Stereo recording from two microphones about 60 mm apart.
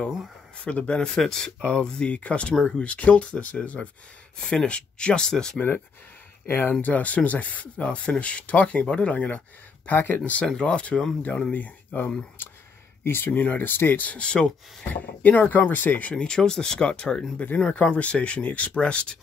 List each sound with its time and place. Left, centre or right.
0.7 s speech: centre
2.5 s speech: centre
2.8 s speech: left
6.4 s speech: left
6.8 s speech: left
9.9 s speech: left
10.4 s speech: centre
11.5 s speech: left
15.0 s speech: left
16.3 s speech: centre